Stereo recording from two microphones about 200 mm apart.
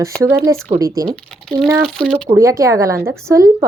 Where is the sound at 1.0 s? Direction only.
5° left (ahead or behind).